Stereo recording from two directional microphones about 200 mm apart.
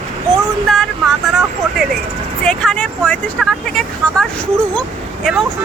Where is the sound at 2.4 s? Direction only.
5° left (ahead or behind).